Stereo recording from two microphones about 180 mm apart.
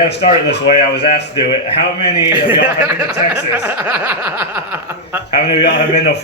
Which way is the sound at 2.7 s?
10° right (ahead or behind).